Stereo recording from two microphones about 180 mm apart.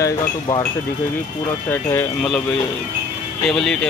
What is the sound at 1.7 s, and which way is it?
Speech, 10° left (ahead or behind).